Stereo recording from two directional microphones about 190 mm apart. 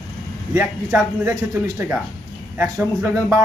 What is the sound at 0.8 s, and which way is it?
A man's voice, 15° right (ahead or behind).